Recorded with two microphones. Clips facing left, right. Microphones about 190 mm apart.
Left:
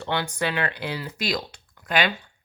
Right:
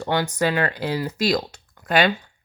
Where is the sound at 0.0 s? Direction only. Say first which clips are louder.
Right 5 dB; 40° right (ahead or behind).